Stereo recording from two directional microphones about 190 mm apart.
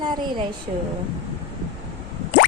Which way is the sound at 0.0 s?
25° right (ahead or behind).